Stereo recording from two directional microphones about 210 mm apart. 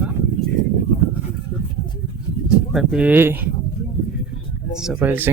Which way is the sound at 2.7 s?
5° right (ahead or behind).